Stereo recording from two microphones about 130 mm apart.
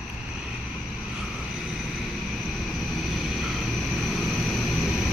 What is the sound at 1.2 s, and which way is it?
Vehicle, 5° right (ahead or behind).